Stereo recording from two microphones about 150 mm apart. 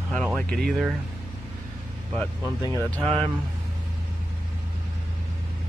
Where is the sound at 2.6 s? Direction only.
20° left (ahead or behind).